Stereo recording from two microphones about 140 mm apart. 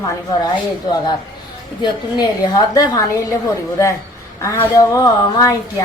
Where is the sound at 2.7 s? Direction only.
25° left (ahead or behind).